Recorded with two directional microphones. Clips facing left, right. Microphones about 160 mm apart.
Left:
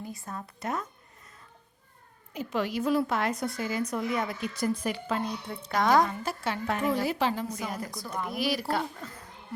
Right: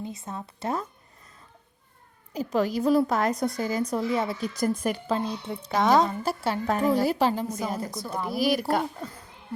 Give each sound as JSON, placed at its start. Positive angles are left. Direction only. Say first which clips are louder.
{"t": 0.0, "sound": "a woman's voice", "louder": "right 3 dB", "side_deg": -20}
{"t": 2.3, "sound": "a woman's voice", "louder": "right 5 dB", "side_deg": -40}
{"t": 5.1, "sound": "a woman's voice", "louder": "right 3 dB", "side_deg": -30}